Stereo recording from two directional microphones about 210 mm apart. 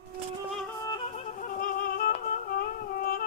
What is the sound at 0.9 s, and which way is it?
Music, 25° left (ahead or behind).